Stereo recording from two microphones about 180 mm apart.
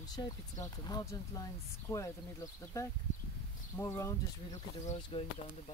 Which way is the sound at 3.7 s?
15° left (ahead or behind).